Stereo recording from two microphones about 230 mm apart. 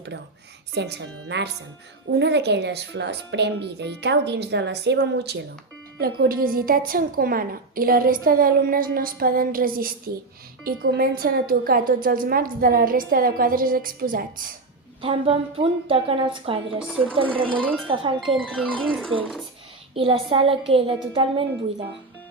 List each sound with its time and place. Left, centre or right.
0.7 s a woman's voice: right
10.9 s a woman's voice: right
15.0 s a woman's voice: right
16.8 s speech: centre
17.3 s a woman's voice: right
17.6 s speech: centre
17.8 s a woman's voice: right
18.3 s speech: centre
19.9 s a woman's voice: right